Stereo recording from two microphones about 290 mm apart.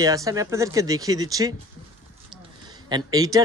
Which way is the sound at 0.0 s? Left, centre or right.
Centre.